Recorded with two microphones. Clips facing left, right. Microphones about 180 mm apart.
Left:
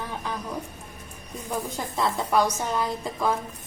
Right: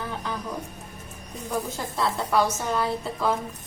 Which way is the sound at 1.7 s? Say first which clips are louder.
Even; 20° left (ahead or behind).